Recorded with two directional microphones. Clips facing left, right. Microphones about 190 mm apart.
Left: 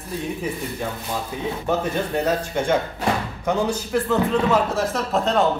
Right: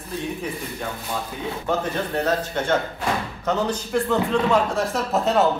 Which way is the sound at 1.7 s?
10° left (ahead or behind).